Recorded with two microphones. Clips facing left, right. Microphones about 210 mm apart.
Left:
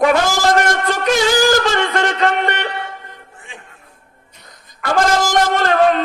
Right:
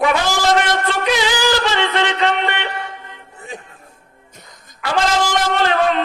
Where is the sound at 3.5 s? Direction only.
40° right (ahead or behind).